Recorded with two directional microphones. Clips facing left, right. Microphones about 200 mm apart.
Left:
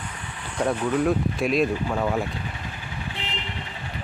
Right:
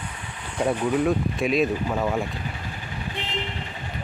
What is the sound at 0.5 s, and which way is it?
Speech, 10° right (ahead or behind).